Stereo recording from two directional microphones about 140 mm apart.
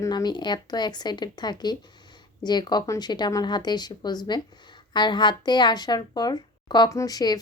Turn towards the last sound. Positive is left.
turn(degrees=30)  # may be behind; listen again after turning